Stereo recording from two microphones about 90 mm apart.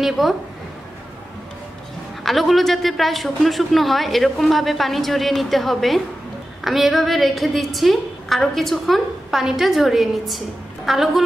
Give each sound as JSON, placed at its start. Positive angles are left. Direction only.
{"t": 0.0, "sound": "speech", "side_deg": 0}
{"t": 2.2, "sound": "a woman's voice", "side_deg": 0}